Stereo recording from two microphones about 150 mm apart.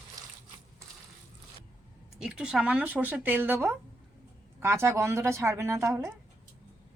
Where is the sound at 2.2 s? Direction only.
5° right (ahead or behind).